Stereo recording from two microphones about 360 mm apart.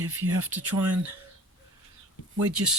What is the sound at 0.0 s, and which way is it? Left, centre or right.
Speech, right.